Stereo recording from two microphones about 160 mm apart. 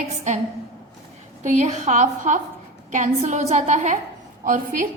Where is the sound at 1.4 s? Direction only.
50° right (ahead or behind).